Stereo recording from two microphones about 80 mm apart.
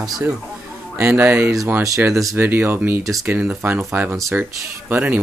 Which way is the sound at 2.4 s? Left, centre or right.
Right.